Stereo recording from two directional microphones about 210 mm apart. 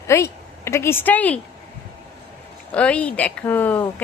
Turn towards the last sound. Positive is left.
turn(degrees=10)  # may be behind; listen again after turning